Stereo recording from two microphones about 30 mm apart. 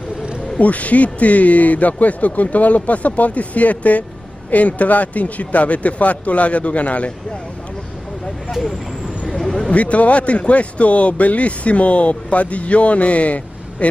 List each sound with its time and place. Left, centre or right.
0.6 s a man's voice: left
8.5 s speech: centre
9.4 s a sound: centre
9.7 s a man's voice: left